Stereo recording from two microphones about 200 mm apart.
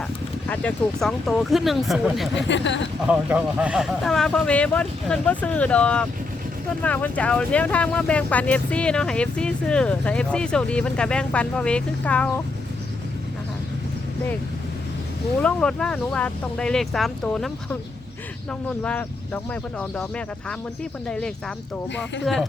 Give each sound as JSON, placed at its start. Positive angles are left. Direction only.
{"t": 0.4, "sound": "speech", "side_deg": 5}
{"t": 2.3, "sound": "speech", "side_deg": 65}
{"t": 3.1, "sound": "speech", "side_deg": -5}
{"t": 15.4, "sound": "speech", "side_deg": 5}
{"t": 18.8, "sound": "speech", "side_deg": 10}